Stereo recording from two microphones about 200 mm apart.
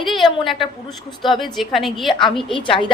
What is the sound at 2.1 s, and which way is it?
Speech, 25° left (ahead or behind).